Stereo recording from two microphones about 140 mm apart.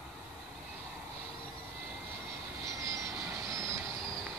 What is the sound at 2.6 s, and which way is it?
Vehicle, 20° right (ahead or behind).